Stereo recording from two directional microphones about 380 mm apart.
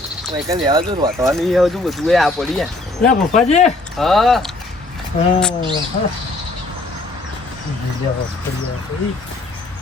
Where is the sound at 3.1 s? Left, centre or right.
Centre.